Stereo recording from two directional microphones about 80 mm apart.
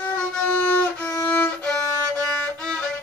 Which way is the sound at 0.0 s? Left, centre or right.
Left.